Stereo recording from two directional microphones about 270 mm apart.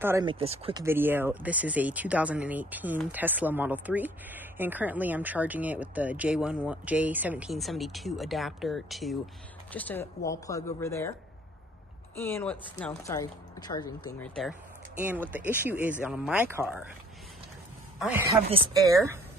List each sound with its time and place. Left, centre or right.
0.0 s speech: centre
0.8 s speech: centre
12.2 s speech: centre
17.9 s a man's voice: centre
18.3 s speech: centre